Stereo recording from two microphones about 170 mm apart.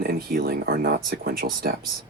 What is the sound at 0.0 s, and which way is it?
Speech, 60° right (ahead or behind).